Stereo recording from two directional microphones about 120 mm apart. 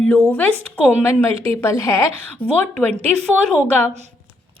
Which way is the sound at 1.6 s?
20° left (ahead or behind).